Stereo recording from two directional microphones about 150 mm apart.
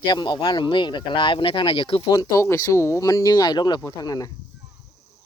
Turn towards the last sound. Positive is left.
turn(degrees=25)  # may be behind; listen again after turning